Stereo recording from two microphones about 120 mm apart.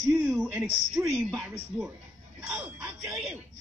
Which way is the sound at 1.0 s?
15° right (ahead or behind).